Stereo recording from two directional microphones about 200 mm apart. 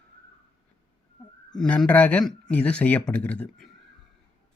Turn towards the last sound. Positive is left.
turn(degrees=5)  # may be behind; listen again after turning